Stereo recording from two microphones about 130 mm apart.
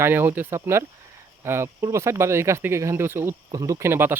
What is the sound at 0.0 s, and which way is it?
Speech, 15° right (ahead or behind).